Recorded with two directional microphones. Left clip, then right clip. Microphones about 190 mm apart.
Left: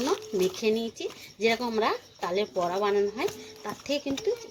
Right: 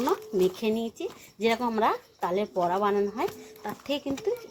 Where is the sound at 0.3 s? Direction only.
5° right (ahead or behind).